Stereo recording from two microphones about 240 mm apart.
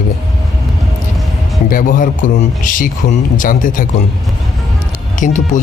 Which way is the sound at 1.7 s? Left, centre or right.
Left.